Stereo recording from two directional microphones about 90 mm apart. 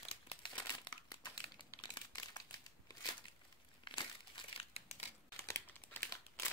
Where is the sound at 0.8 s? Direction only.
50° left (ahead or behind).